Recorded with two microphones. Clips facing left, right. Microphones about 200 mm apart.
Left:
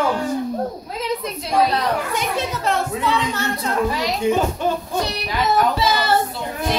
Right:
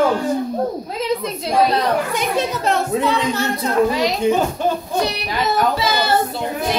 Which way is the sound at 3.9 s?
20° right (ahead or behind).